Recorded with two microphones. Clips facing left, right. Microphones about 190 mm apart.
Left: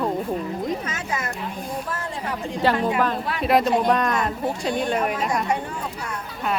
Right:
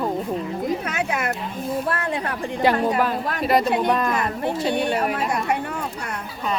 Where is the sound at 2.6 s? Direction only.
15° right (ahead or behind).